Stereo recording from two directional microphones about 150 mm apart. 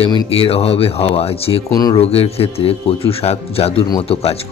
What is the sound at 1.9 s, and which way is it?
Speech, 40° left (ahead or behind).